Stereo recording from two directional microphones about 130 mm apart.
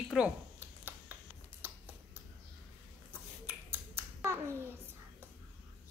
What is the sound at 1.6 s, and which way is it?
Finger snapping, 15° right (ahead or behind).